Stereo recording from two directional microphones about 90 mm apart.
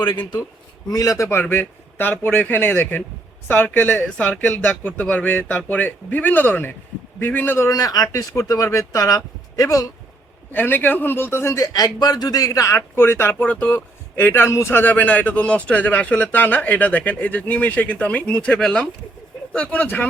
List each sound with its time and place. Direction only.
0.0 s a man's voice: 60° left (ahead or behind)
0.9 s speech: 40° left (ahead or behind); by 7.7 s 25° left (ahead or behind)
7.7 s speech: 45° left (ahead or behind)
10.5 s speech: 20° left (ahead or behind)
11.6 s a man's voice: 45° left (ahead or behind)
13.0 s speech: 25° left (ahead or behind)
13.4 s a man's voice: 15° left (ahead or behind)